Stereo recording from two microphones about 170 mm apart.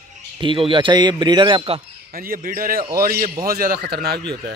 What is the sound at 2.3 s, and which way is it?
Speech, 55° right (ahead or behind).